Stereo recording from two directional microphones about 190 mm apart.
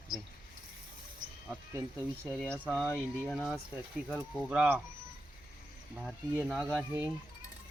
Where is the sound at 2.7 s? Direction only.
10° right (ahead or behind).